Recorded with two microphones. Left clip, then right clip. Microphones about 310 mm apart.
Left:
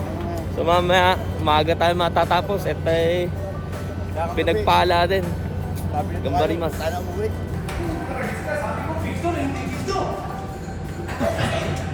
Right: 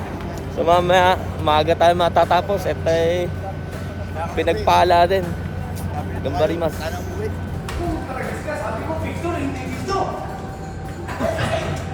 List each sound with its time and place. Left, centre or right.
0.6 s speech: centre
6.2 s speech: centre
9.0 s a sound: centre
11.2 s music: centre